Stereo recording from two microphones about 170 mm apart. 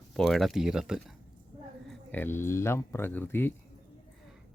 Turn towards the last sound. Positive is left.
turn(degrees=10)  # may be behind; listen again after turning